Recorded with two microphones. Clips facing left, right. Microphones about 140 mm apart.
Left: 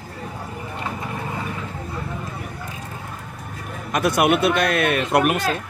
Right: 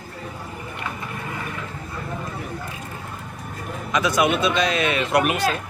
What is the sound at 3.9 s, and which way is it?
A man's voice, 60° left (ahead or behind).